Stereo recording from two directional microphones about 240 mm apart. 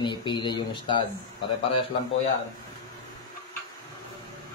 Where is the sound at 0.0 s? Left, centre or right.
Centre.